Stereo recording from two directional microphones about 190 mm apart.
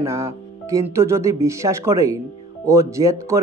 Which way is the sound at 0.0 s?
15° right (ahead or behind).